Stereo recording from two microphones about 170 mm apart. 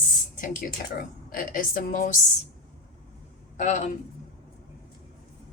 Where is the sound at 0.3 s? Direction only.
50° left (ahead or behind).